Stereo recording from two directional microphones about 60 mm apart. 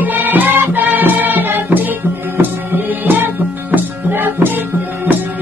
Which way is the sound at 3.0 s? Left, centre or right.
Right.